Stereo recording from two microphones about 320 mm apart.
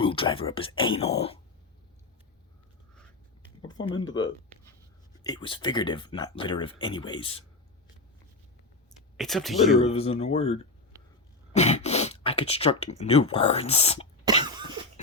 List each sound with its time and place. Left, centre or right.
0.0 s speech: centre
3.7 s speech: centre
5.2 s speech: centre
9.1 s speech: centre
9.6 s speech: centre
14.4 s cough: centre